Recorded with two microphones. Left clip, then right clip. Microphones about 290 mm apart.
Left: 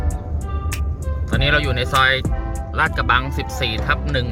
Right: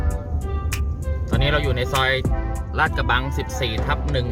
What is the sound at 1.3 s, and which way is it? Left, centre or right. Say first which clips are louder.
Speech: left 4 dB; centre.